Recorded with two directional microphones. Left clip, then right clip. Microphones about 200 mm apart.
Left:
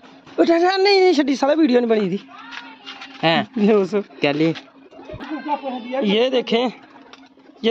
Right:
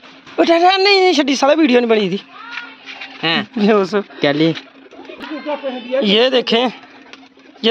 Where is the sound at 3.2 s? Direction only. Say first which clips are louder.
Even; 25° left (ahead or behind).